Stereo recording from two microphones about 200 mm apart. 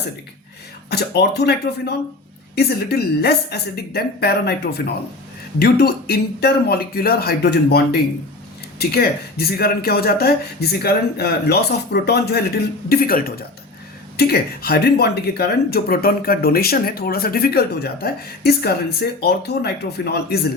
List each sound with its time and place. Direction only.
0.9 s speech: 55° left (ahead or behind)